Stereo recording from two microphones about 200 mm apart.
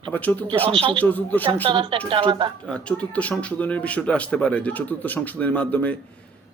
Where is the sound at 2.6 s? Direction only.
5° left (ahead or behind).